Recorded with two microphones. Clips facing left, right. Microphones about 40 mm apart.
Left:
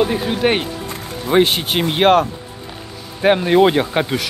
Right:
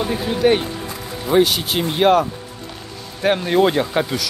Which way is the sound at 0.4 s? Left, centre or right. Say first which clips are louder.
Right 5 dB; left.